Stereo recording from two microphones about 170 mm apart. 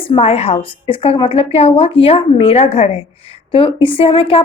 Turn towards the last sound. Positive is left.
turn(degrees=35)  # may be behind; listen again after turning